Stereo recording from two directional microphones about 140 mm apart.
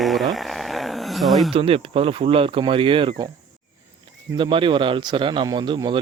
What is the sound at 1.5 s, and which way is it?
Speech, 40° right (ahead or behind).